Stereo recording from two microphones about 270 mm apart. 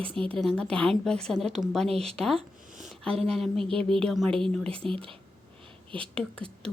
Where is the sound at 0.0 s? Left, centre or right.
Centre.